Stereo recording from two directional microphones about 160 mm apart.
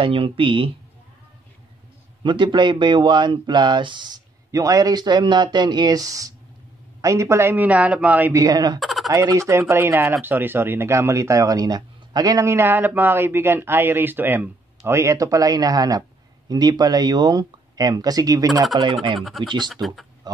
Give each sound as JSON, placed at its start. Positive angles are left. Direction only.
{"t": 0.0, "sound": "speech", "side_deg": -35}
{"t": 2.2, "sound": "speech", "side_deg": -30}
{"t": 8.7, "sound": "turkey", "side_deg": 0}
{"t": 9.1, "sound": "speech", "side_deg": -20}
{"t": 19.1, "sound": "speech", "side_deg": 0}
{"t": 19.4, "sound": "speech", "side_deg": -30}